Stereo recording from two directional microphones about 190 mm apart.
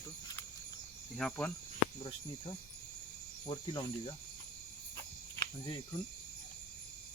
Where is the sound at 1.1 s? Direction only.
5° left (ahead or behind).